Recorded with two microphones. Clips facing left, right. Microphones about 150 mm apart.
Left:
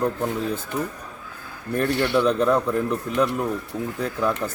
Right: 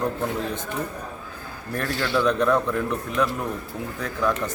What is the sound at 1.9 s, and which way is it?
Speech, 60° left (ahead or behind).